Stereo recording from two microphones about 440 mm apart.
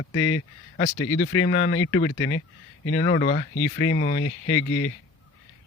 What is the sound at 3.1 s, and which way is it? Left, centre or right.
Speech, centre.